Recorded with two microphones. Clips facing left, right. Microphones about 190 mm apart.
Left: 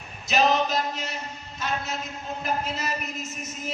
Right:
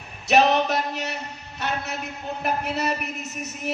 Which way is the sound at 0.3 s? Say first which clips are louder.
Right 3 dB; 65° right (ahead or behind).